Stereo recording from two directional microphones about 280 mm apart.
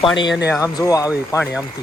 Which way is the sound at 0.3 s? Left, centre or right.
Left.